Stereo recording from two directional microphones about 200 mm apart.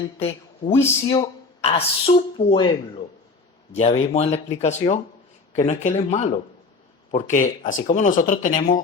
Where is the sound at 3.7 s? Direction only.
30° left (ahead or behind).